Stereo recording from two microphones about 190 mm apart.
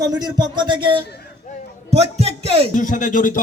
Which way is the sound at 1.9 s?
35° right (ahead or behind).